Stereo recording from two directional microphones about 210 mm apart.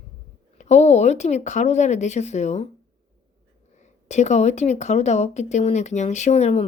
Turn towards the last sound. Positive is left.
turn(degrees=35)  # may be behind; listen again after turning